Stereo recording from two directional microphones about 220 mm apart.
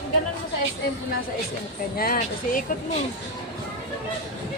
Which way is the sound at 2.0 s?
40° left (ahead or behind).